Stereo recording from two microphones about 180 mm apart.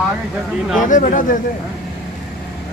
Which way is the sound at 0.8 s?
45° left (ahead or behind).